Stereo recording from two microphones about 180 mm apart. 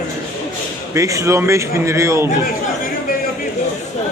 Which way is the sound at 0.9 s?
15° right (ahead or behind).